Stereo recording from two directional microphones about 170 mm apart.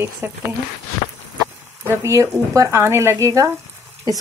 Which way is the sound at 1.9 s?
15° right (ahead or behind).